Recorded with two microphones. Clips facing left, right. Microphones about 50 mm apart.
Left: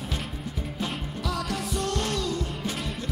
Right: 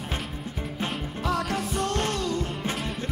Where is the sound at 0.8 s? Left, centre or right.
Right.